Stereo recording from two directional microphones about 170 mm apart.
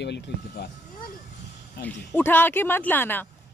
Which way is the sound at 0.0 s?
90° left.